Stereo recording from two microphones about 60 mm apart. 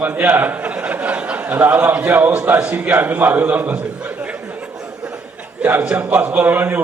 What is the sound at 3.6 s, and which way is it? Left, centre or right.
Speech, right.